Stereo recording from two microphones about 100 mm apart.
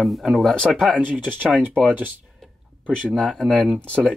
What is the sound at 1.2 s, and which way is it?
Speech, 15° right (ahead or behind).